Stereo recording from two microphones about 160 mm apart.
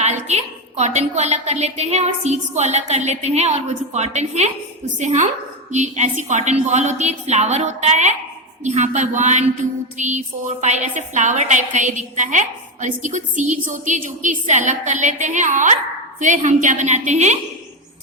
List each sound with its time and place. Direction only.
0.0 s a woman's voice: 45° right (ahead or behind)